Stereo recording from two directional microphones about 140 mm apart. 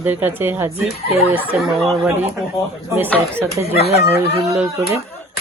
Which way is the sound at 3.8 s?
45° right (ahead or behind).